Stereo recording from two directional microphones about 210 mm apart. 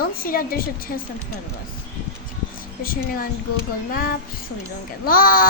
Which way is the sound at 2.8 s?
45° left (ahead or behind).